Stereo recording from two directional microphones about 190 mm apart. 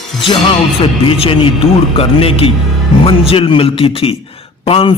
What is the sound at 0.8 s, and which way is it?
A man's voice, 30° left (ahead or behind).